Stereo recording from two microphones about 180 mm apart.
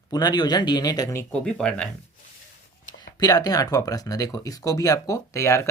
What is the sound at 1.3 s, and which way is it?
Speech, 5° left (ahead or behind).